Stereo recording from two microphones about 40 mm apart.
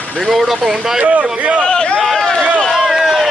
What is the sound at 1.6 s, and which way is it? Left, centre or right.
Speech, left.